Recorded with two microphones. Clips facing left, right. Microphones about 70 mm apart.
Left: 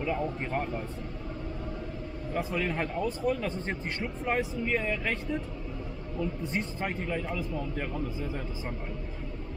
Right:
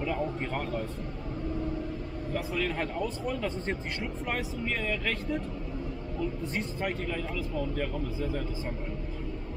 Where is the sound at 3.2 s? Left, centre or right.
Left.